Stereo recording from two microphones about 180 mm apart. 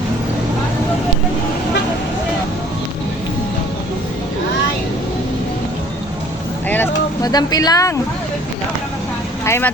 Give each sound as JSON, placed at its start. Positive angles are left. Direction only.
{"t": 6.7, "sound": "vehicle", "side_deg": 10}
{"t": 9.4, "sound": "speech", "side_deg": 15}